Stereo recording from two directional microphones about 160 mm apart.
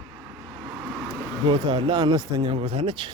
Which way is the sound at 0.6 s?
25° right (ahead or behind).